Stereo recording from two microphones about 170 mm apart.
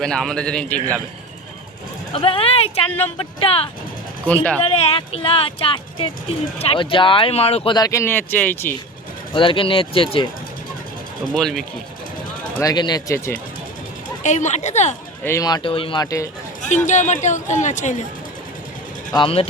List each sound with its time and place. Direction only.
0.0 s a man's voice: centre (ahead or behind)
2.1 s speech: 30° left (ahead or behind)
4.8 s speech: 35° left (ahead or behind); by 8.7 s 10° left (ahead or behind)
9.3 s speech: 30° left (ahead or behind)
11.3 s a man's voice: 5° left (ahead or behind)
12.5 s speech: 25° left (ahead or behind)
14.3 s speech: 45° left (ahead or behind)
15.2 s speech: 15° left (ahead or behind)
16.6 s speech: 45° left (ahead or behind)
19.1 s speech: 30° left (ahead or behind)